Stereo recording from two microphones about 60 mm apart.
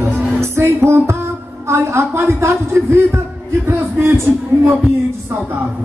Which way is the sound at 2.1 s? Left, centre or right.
Right.